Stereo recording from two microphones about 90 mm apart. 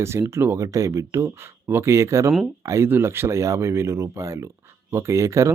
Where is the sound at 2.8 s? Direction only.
25° right (ahead or behind).